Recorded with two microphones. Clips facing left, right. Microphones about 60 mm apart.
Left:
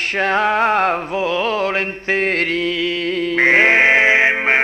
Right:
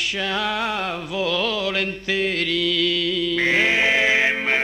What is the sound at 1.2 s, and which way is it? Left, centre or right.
Mantra, left.